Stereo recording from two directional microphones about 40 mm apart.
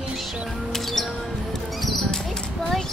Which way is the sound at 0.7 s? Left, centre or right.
Centre.